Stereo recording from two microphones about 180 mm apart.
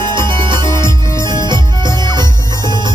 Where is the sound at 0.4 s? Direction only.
25° right (ahead or behind).